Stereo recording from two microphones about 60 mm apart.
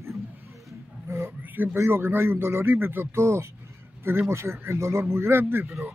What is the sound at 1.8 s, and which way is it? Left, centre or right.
Speech, right.